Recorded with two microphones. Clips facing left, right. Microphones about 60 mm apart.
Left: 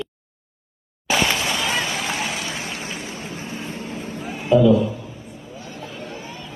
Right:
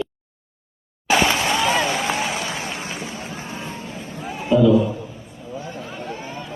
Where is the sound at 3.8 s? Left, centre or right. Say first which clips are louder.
Left 2 dB; left.